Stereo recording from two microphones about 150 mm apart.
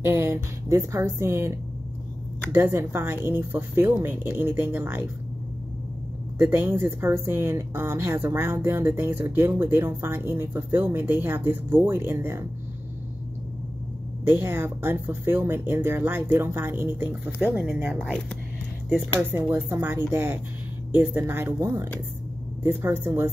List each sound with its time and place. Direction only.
0.0 s speech: 15° right (ahead or behind)
6.3 s speech: 15° right (ahead or behind)
14.2 s speech: 15° right (ahead or behind)
19.3 s speech: 15° right (ahead or behind)